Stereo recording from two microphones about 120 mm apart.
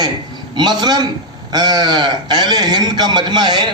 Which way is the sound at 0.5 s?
40° right (ahead or behind).